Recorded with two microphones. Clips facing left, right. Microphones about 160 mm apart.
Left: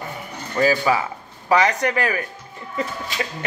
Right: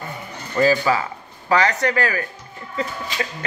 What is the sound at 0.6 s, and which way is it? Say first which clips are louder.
Speech: right 1 dB; 10° left (ahead or behind).